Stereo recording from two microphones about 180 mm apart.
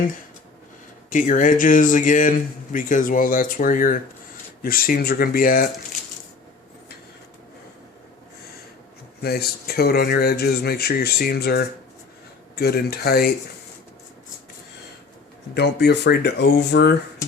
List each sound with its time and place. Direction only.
1.1 s speech: 45° left (ahead or behind)
9.2 s speech: 60° left (ahead or behind)
15.5 s speech: 70° left (ahead or behind)